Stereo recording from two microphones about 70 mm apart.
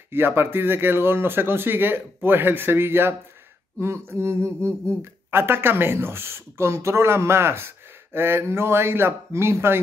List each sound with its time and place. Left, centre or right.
0.1 s speech: right